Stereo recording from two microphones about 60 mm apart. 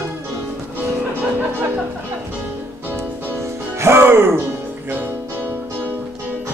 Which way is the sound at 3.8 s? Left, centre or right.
Right.